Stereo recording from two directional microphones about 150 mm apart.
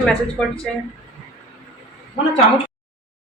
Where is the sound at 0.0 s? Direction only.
5° left (ahead or behind).